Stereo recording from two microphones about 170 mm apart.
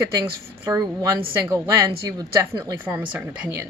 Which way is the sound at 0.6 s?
15° right (ahead or behind).